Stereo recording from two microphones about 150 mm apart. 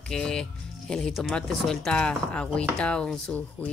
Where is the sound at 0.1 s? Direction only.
5° left (ahead or behind).